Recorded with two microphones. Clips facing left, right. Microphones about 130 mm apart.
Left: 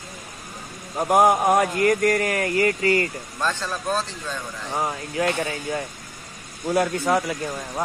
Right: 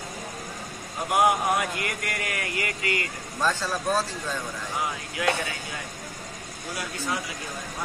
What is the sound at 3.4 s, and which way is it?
Speech, 10° right (ahead or behind).